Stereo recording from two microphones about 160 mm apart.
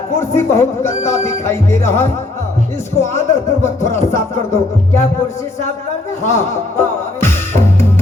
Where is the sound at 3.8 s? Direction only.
15° left (ahead or behind).